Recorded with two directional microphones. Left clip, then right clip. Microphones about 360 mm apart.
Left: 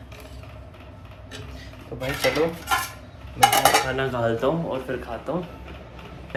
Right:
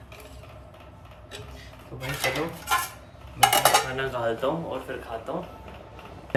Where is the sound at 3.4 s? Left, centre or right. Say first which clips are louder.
Left 2 dB; centre.